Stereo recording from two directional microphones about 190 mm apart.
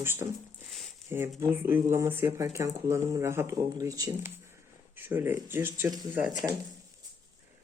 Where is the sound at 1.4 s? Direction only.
10° right (ahead or behind).